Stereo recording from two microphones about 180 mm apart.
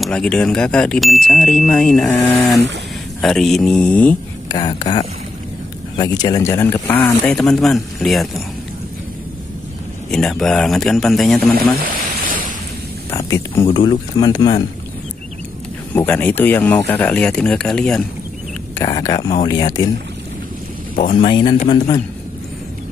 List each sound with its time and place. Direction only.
0.0 s speech: 5° left (ahead or behind)
4.6 s speech: 25° left (ahead or behind); by 8.4 s centre (ahead or behind)
10.1 s speech: 5° left (ahead or behind)
11.8 s a sound: 50° right (ahead or behind)
13.1 s speech: 15° left (ahead or behind)
15.9 s speech: 10° left (ahead or behind)
18.8 s speech: 20° left (ahead or behind)
21.3 s speech: 25° left (ahead or behind)